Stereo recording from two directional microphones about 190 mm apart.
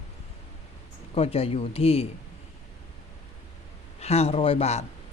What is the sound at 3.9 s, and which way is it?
Speech, 35° left (ahead or behind).